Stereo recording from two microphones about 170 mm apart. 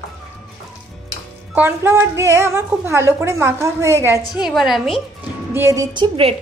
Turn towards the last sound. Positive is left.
turn(degrees=-30)  # may be behind; listen again after turning